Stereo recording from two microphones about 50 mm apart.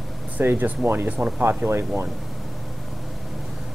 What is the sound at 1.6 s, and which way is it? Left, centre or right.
Speech, right.